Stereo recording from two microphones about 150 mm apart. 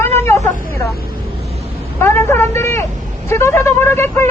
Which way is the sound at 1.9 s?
15° left (ahead or behind).